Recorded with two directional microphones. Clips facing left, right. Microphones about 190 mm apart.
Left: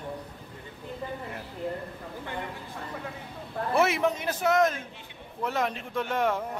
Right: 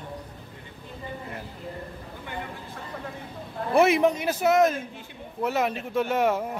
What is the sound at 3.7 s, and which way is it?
Speech, 15° right (ahead or behind).